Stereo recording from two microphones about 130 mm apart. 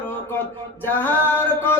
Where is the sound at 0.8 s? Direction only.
15° left (ahead or behind).